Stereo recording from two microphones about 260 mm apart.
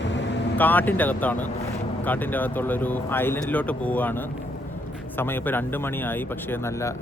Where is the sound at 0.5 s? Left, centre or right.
Centre.